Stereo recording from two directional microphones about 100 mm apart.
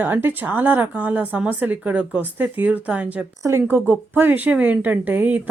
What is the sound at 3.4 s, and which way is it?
Speech, 25° right (ahead or behind).